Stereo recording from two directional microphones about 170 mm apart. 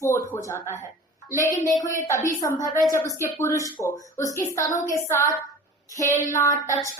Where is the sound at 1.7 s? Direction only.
50° left (ahead or behind).